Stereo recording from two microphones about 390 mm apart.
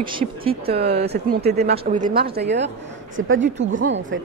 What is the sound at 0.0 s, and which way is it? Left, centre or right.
Speech, centre.